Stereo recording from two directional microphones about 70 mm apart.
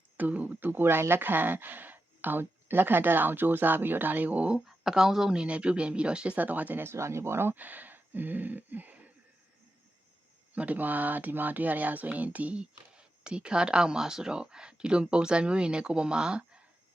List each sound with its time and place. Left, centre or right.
0.2 s speech: right
4.6 s speech: centre; by 6.8 s right
6.8 s speech: right
10.5 s speech: right